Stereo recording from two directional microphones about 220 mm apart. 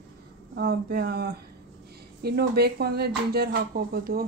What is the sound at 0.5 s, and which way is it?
Speech, 45° right (ahead or behind).